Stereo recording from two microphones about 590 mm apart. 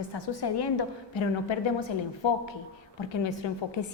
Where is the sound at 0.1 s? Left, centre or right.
Left.